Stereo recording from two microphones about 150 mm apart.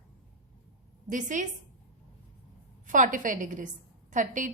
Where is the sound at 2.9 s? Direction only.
60° right (ahead or behind).